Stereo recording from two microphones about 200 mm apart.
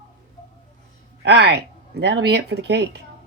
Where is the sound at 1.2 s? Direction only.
55° right (ahead or behind).